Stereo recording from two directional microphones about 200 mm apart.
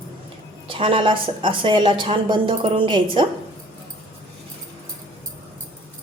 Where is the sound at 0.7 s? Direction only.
25° right (ahead or behind).